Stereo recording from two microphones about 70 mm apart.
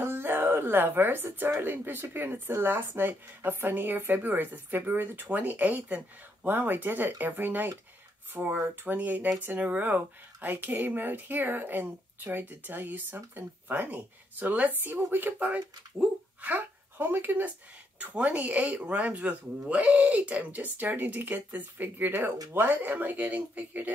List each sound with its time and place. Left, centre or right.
0.0 s speech: right